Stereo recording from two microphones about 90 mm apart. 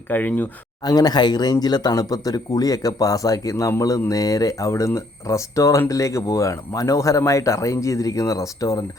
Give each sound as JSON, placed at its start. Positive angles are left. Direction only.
{"t": 0.1, "sound": "speech", "side_deg": 20}
{"t": 0.9, "sound": "speech", "side_deg": 45}